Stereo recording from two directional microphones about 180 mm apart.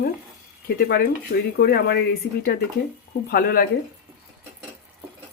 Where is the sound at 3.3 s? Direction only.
55° left (ahead or behind).